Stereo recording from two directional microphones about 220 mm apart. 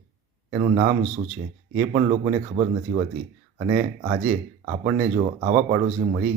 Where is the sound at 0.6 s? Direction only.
35° right (ahead or behind).